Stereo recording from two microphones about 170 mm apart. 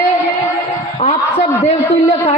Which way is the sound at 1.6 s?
40° left (ahead or behind).